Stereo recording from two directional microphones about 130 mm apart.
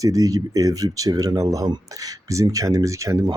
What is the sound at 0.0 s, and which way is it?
Speech, 25° right (ahead or behind).